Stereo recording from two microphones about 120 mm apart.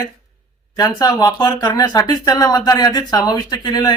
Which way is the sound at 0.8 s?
30° left (ahead or behind).